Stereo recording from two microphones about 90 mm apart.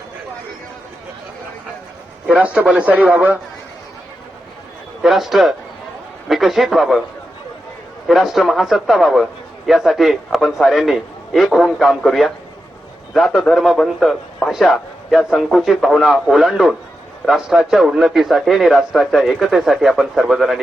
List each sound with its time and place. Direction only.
2.4 s speech: 15° right (ahead or behind)
5.0 s a man's voice: centre (ahead or behind)
8.0 s a man's voice: 5° right (ahead or behind)